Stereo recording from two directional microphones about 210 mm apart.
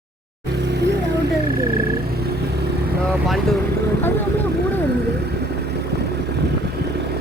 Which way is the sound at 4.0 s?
10° left (ahead or behind).